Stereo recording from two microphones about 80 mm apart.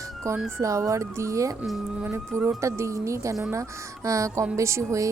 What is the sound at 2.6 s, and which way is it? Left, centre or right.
Speech, right.